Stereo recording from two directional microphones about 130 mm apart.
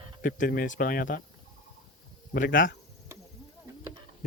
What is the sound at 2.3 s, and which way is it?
Speech, 90° left.